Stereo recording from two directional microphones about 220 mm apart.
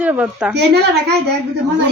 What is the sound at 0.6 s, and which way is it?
Speech, 50° right (ahead or behind).